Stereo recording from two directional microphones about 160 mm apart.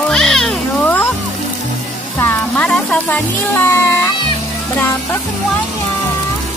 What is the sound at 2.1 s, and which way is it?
Speech, 10° left (ahead or behind).